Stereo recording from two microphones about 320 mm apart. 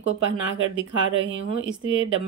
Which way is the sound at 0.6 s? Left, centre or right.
Right.